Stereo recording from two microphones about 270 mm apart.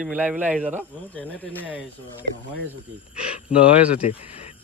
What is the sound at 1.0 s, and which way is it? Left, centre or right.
Speech, centre.